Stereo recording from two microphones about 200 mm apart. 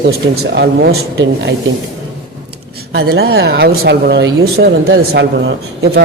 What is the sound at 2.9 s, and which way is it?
Speech, 55° right (ahead or behind).